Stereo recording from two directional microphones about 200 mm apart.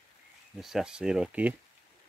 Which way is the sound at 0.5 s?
Centre (ahead or behind).